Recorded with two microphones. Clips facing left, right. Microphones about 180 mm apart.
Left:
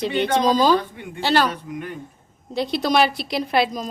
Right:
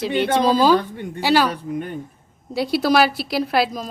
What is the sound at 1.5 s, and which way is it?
Speech, 35° right (ahead or behind).